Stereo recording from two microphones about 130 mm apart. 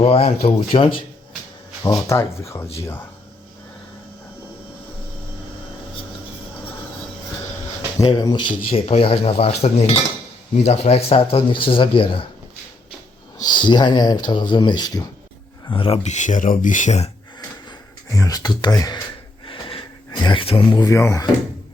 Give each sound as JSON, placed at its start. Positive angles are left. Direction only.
{"t": 0.0, "sound": "speech", "side_deg": 50}
{"t": 1.8, "sound": "speech", "side_deg": 25}
{"t": 8.1, "sound": "speech", "side_deg": 35}
{"t": 8.9, "sound": "speech", "side_deg": 50}
{"t": 13.4, "sound": "speech", "side_deg": 35}
{"t": 16.0, "sound": "speech", "side_deg": 70}
{"t": 18.1, "sound": "speech", "side_deg": 25}
{"t": 19.5, "sound": "a sound", "side_deg": 40}
{"t": 20.8, "sound": "speech", "side_deg": 20}